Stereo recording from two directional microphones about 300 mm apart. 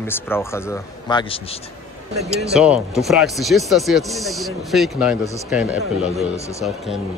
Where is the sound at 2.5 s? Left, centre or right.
Centre.